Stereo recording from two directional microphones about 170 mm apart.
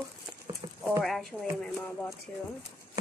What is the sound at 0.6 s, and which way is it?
Clip-clop, 25° right (ahead or behind).